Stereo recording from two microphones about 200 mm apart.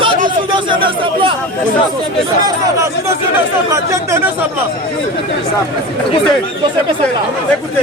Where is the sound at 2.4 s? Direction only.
15° right (ahead or behind).